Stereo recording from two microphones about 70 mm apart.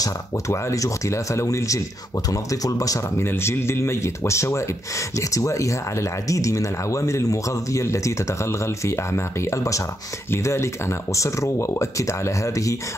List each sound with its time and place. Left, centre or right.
0.5 s speech: left
3.2 s speech: left